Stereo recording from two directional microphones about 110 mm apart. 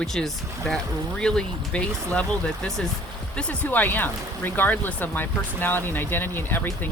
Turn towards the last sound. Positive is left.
turn(degrees=20)  # may be behind; listen again after turning